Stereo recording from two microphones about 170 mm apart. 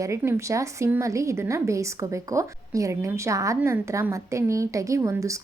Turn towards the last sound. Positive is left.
turn(degrees=-20)  # may be behind; listen again after turning